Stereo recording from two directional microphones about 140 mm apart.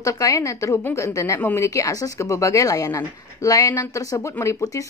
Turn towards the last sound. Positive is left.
turn(degrees=20)  # may be behind; listen again after turning